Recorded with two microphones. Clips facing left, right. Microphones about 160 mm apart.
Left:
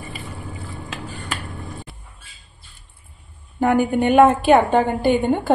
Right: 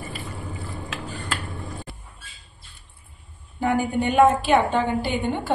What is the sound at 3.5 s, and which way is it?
A woman's voice, 50° left (ahead or behind).